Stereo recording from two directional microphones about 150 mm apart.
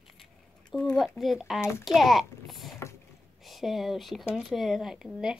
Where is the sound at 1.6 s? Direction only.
15° left (ahead or behind).